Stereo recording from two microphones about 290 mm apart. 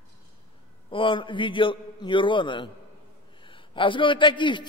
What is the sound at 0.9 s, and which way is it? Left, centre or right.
A man's voice, centre.